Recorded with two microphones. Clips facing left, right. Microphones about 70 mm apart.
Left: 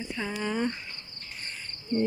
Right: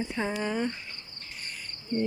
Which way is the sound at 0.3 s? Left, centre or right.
Centre.